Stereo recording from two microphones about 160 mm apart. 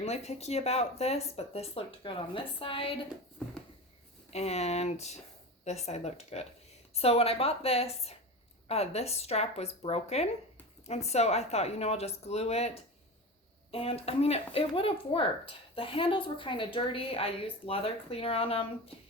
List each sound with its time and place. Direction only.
0.0 s a woman's voice: 40° left (ahead or behind)
3.4 s a sound: 5° left (ahead or behind)
4.3 s a woman's voice: 40° left (ahead or behind)